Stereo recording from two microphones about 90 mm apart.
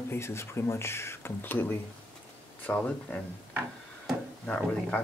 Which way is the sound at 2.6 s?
15° left (ahead or behind).